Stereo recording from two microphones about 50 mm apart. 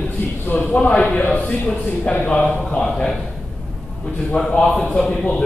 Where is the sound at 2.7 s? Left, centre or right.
Centre.